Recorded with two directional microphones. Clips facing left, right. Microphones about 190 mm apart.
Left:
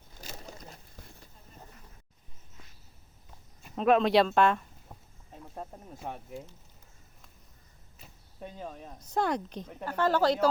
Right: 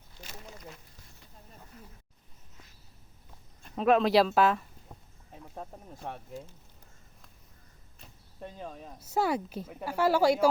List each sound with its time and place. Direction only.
0.2 s a sound: 40° left (ahead or behind)
3.6 s speech: centre (ahead or behind)
7.9 s speech: 5° left (ahead or behind)